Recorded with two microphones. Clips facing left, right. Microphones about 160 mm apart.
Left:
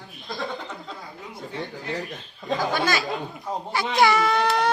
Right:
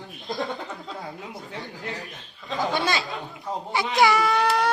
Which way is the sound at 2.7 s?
25° right (ahead or behind).